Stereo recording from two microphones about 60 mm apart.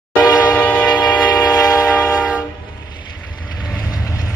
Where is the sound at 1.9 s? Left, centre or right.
Left.